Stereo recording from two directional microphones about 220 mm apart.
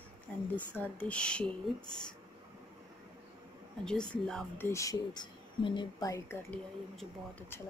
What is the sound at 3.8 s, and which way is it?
Speech, 5° left (ahead or behind).